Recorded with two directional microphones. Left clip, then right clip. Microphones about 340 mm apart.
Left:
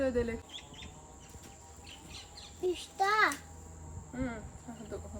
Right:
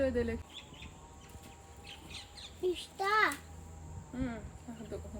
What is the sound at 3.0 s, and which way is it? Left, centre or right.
Speech, centre.